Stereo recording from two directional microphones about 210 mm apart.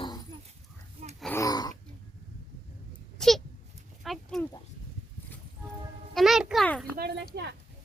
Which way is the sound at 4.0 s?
Centre (ahead or behind).